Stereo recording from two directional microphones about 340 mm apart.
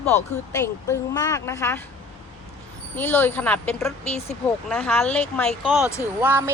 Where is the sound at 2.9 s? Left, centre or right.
Centre.